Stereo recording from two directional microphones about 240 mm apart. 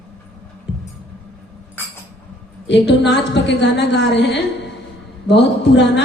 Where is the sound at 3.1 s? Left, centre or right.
Left.